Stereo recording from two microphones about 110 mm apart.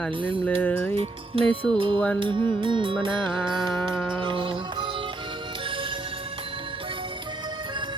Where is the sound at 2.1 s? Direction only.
50° right (ahead or behind).